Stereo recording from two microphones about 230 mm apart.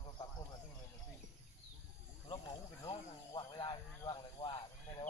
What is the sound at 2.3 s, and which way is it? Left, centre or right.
Speech, centre.